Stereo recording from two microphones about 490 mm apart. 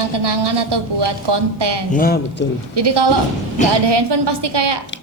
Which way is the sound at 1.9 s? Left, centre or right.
Centre.